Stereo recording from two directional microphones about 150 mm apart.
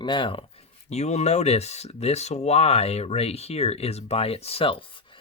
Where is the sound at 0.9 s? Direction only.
45° left (ahead or behind).